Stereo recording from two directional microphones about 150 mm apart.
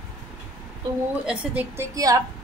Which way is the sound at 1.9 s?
25° right (ahead or behind).